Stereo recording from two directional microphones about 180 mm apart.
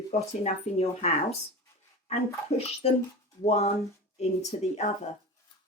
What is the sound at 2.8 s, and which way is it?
Speech, 35° left (ahead or behind).